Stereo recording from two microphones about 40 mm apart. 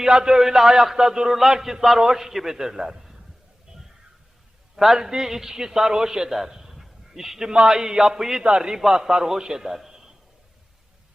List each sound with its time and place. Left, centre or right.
0.0 s a man's voice: centre
4.8 s a man's voice: centre